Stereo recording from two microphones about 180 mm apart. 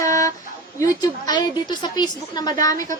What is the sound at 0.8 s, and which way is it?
A woman's voice, 20° left (ahead or behind).